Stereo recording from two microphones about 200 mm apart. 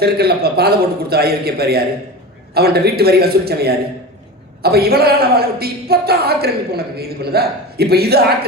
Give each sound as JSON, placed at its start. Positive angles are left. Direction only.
{"t": 0.0, "sound": "a woman's voice", "side_deg": -50}